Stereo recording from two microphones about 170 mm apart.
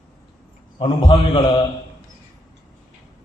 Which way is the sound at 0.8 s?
25° left (ahead or behind).